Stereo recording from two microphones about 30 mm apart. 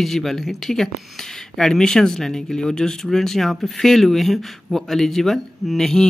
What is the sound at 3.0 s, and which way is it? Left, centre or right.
Speech, centre.